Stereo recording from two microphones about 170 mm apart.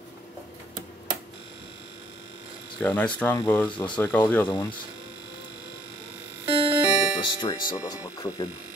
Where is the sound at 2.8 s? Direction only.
10° left (ahead or behind).